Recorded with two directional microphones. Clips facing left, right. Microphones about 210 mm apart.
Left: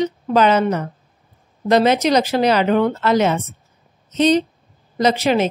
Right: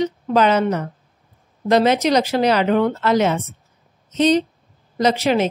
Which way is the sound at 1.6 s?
20° left (ahead or behind).